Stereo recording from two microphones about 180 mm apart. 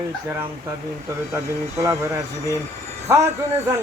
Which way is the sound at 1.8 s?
15° right (ahead or behind).